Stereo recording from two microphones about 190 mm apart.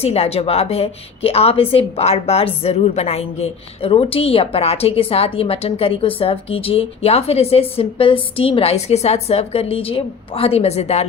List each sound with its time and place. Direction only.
0.0 s a woman's voice: 30° left (ahead or behind)